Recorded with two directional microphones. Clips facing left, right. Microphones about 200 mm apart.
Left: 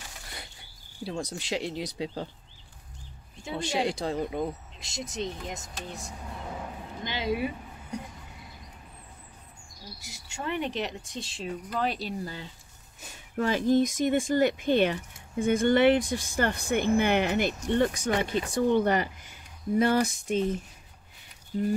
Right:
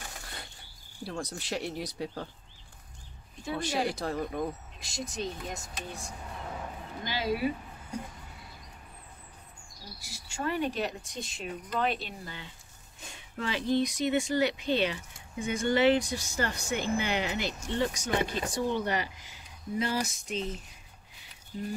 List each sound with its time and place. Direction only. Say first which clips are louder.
1.0 s speech: left 3 dB; 15° left (ahead or behind)
3.4 s speech: left 2 dB; 25° left (ahead or behind)
10.0 s speech: right 1 dB; 20° left (ahead or behind); by 20.6 s 55° left (ahead or behind)